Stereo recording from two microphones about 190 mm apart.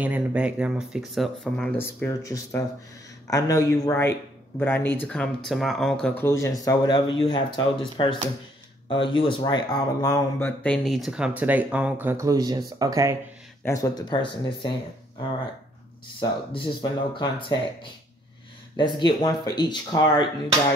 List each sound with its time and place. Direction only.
0.0 s speech: 10° right (ahead or behind); by 10.5 s 20° left (ahead or behind)
10.6 s speech: 5° left (ahead or behind); by 13.2 s 15° right (ahead or behind)
13.7 s speech: 20° left (ahead or behind)
16.2 s speech: 25° left (ahead or behind)
18.8 s speech: 25° left (ahead or behind)